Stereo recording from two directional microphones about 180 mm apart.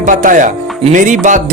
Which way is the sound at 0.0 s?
45° right (ahead or behind).